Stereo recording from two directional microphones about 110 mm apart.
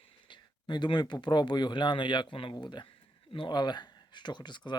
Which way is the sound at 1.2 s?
40° left (ahead or behind).